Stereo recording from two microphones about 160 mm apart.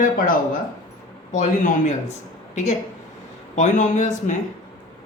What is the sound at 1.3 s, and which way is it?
Speech, 50° left (ahead or behind).